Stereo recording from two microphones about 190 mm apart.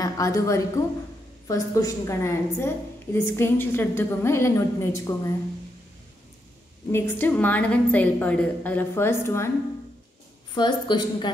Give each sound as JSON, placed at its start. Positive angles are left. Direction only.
{"t": 0.0, "sound": "a woman's voice", "side_deg": 15}
{"t": 6.9, "sound": "a woman's voice", "side_deg": 10}
{"t": 10.5, "sound": "a woman's voice", "side_deg": 25}